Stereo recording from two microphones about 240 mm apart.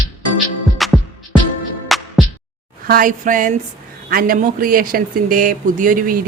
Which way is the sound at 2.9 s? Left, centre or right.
Right.